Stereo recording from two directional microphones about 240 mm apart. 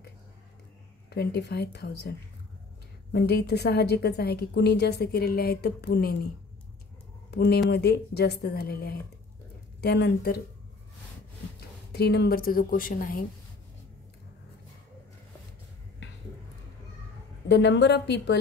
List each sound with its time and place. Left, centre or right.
1.1 s a woman's voice: left
7.2 s a woman's voice: left
11.9 s a woman's voice: left
17.5 s a woman's voice: left